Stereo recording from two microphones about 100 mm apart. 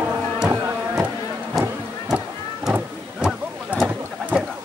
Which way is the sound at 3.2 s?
5° right (ahead or behind).